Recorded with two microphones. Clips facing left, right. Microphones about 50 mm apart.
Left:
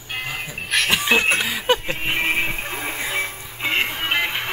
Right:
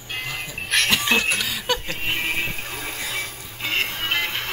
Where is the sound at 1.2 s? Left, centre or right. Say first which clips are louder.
Left 4 dB; left.